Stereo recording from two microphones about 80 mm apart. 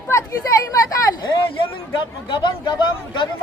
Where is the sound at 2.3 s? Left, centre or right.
Left.